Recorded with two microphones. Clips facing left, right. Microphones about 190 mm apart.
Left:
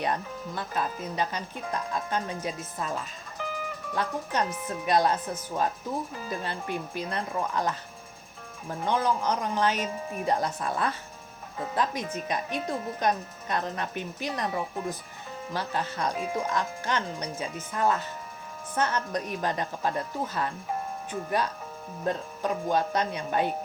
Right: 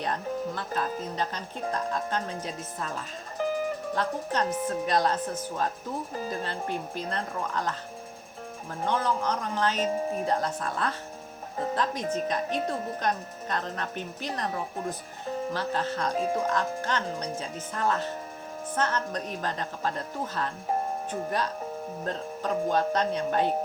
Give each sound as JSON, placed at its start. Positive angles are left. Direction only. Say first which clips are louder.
{"t": 0.0, "sound": "speech", "louder": "right 1 dB", "side_deg": 10}
{"t": 3.3, "sound": "music", "louder": "right 7 dB", "side_deg": -40}
{"t": 3.9, "sound": "speech", "louder": "left 2 dB", "side_deg": 10}
{"t": 6.1, "sound": "speech", "louder": "right 2 dB", "side_deg": -40}
{"t": 6.4, "sound": "speech", "louder": "right 1 dB", "side_deg": 15}
{"t": 8.9, "sound": "speech", "louder": "left 1 dB", "side_deg": 10}
{"t": 9.8, "sound": "speech", "louder": "right 5 dB", "side_deg": -30}
{"t": 10.2, "sound": "speech", "louder": "left 1 dB", "side_deg": 10}
{"t": 22.0, "sound": "speech", "louder": "left 4 dB", "side_deg": 10}